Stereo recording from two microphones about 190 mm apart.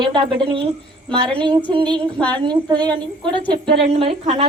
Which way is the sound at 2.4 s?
25° right (ahead or behind).